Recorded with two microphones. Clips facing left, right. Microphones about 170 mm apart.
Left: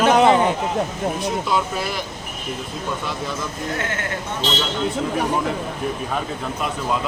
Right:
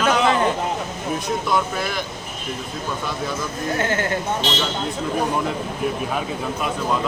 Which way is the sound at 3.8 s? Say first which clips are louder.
Right 7 dB; 35° right (ahead or behind).